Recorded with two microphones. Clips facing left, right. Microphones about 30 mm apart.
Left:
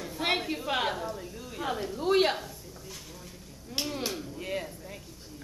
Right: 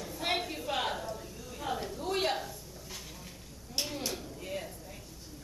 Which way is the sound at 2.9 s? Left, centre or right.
Centre.